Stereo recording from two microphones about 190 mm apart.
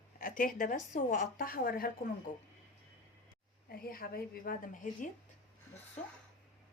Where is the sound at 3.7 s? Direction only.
50° left (ahead or behind).